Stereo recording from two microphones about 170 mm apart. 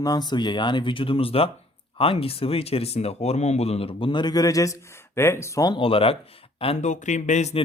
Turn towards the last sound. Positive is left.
turn(degrees=40)  # may be behind; listen again after turning